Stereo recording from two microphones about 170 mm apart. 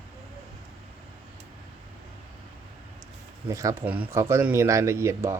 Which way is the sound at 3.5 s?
20° right (ahead or behind).